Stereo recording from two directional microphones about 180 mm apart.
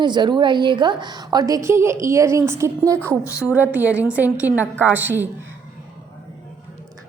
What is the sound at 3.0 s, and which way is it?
Speech, 10° left (ahead or behind).